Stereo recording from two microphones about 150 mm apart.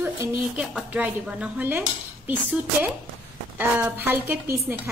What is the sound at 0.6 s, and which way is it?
A woman's voice, 5° right (ahead or behind).